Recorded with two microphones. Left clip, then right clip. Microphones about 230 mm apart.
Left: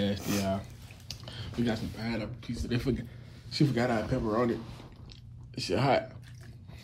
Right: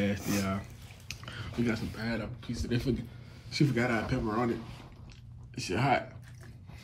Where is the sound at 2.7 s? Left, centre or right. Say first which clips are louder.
Left 1 dB; centre.